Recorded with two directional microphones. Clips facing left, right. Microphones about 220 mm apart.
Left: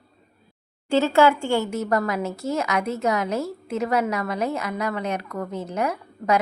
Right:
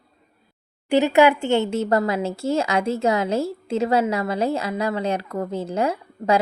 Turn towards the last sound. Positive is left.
turn(degrees=-30)  # may be behind; listen again after turning